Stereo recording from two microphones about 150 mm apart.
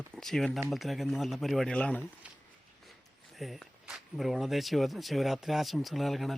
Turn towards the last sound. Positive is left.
turn(degrees=0)  # may be behind; listen again after turning